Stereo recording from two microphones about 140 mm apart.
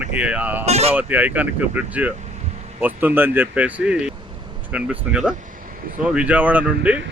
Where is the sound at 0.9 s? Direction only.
10° right (ahead or behind).